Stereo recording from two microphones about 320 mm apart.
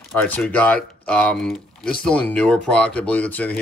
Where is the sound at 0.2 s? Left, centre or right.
Centre.